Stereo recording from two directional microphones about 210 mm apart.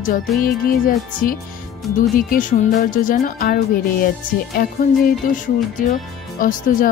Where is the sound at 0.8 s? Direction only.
40° left (ahead or behind).